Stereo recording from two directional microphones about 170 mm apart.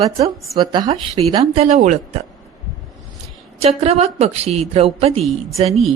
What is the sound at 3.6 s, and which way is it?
Speech, 40° right (ahead or behind).